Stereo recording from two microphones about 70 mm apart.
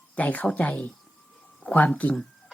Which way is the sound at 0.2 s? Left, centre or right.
Left.